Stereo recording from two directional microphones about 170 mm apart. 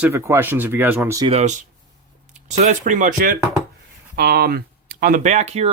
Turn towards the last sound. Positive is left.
turn(degrees=-40)  # may be behind; listen again after turning